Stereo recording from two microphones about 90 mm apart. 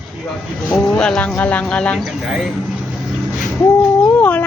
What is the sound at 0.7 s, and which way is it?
Speech, 10° left (ahead or behind).